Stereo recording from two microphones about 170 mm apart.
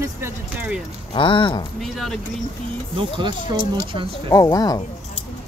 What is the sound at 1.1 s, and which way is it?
Speech, 30° left (ahead or behind).